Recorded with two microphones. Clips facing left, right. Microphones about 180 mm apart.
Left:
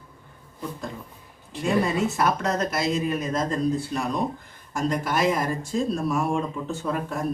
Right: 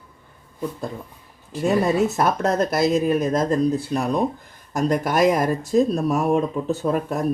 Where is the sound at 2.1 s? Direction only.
45° right (ahead or behind).